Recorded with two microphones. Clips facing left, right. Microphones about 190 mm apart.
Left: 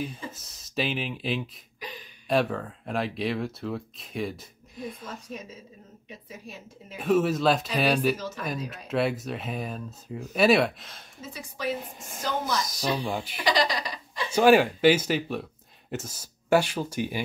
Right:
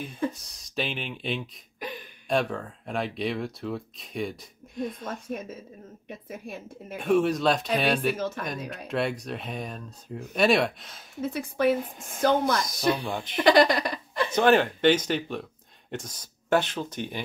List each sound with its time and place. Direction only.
0.3 s speech: centre (ahead or behind)
1.8 s a sound: 55° right (ahead or behind)
2.2 s speech: centre (ahead or behind)
5.0 s a woman's voice: 55° right (ahead or behind)
7.0 s speech: centre (ahead or behind)
8.2 s a woman's voice: 55° right (ahead or behind)
8.8 s speech: 5° left (ahead or behind)
11.1 s a woman's voice: 60° right (ahead or behind)
11.7 s speech: centre (ahead or behind)
12.2 s a woman's voice: 55° right (ahead or behind)
13.0 s speech: 5° left (ahead or behind)
13.4 s speech: 55° right (ahead or behind)
14.3 s speech: 10° left (ahead or behind)